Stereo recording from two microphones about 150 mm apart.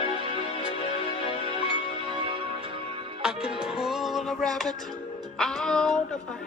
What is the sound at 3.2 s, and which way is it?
Music, 5° right (ahead or behind).